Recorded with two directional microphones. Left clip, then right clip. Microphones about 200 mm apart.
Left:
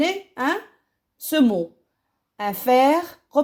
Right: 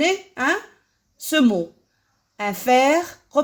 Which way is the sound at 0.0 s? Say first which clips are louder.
Right 2 dB; 35° left (ahead or behind).